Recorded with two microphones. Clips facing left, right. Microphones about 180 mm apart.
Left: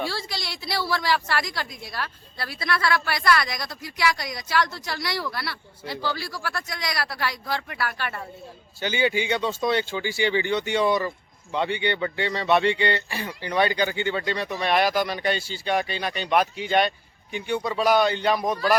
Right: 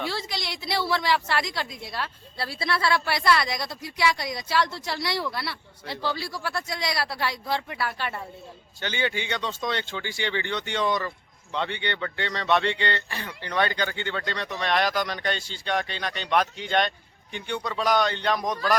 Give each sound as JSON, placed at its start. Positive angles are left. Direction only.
{"t": 0.1, "sound": "a woman's voice", "side_deg": -20}
{"t": 8.8, "sound": "speech", "side_deg": 10}